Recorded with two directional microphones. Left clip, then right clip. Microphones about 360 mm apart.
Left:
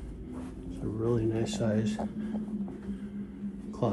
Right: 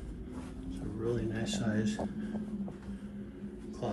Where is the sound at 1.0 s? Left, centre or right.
Centre.